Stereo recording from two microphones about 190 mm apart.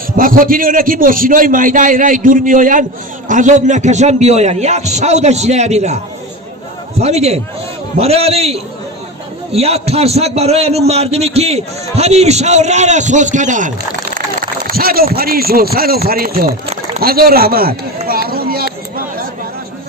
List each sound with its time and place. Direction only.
0.2 s a man's voice: 45° right (ahead or behind)
7.0 s a man's voice: 35° right (ahead or behind); by 16.6 s 50° right (ahead or behind)
17.0 s a sound: 50° right (ahead or behind)